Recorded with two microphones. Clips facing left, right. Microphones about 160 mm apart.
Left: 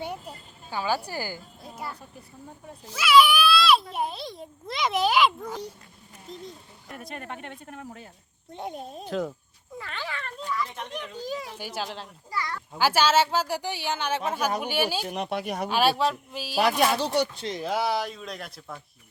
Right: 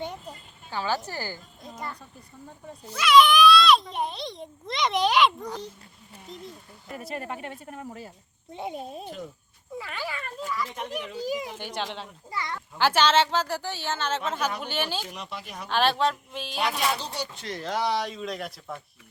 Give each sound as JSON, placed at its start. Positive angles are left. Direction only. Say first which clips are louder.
{"t": 0.0, "sound": "a child's voice", "louder": "left 1 dB", "side_deg": 10}
{"t": 9.0, "sound": "speech", "louder": "left 8 dB", "side_deg": 90}
{"t": 9.7, "sound": "children playing", "louder": "right 2 dB", "side_deg": -10}
{"t": 10.9, "sound": "a child's voice", "louder": "right 4 dB", "side_deg": -10}
{"t": 11.5, "sound": "a child's voice", "louder": "right 1 dB", "side_deg": 5}
{"t": 12.3, "sound": "a sound", "louder": "left 1 dB", "side_deg": -20}
{"t": 12.7, "sound": "speech", "louder": "even", "side_deg": 5}
{"t": 15.1, "sound": "speech", "louder": "left 9 dB", "side_deg": 60}
{"t": 15.7, "sound": "a child's voice", "louder": "even", "side_deg": 10}
{"t": 17.0, "sound": "speech", "louder": "left 9 dB", "side_deg": 65}
{"t": 17.3, "sound": "speech", "louder": "left 3 dB", "side_deg": 25}
{"t": 17.6, "sound": "a child's voice", "louder": "even", "side_deg": 10}